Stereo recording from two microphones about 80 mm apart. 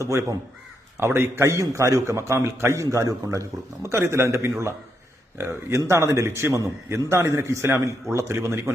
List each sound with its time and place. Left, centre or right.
0.0 s a man's voice: right
2.8 s a man's voice: right